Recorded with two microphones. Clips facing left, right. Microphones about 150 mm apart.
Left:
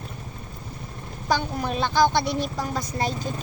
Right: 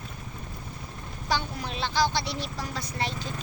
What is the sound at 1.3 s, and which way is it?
A woman's voice, 50° left (ahead or behind).